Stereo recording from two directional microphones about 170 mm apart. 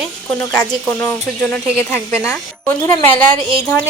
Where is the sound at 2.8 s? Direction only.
10° left (ahead or behind).